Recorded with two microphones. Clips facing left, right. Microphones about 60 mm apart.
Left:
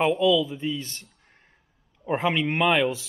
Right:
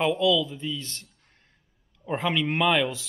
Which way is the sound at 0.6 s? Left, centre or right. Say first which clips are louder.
Left 3 dB; left.